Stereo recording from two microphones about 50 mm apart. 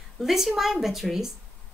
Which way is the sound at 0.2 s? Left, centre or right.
Centre.